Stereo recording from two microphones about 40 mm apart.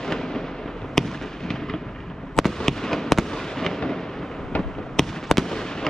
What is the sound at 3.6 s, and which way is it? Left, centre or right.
Thunder, centre.